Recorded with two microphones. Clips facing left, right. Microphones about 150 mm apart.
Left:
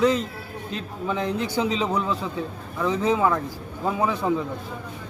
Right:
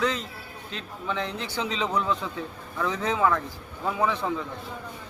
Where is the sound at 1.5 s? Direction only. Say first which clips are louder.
Left 1 dB; 10° left (ahead or behind).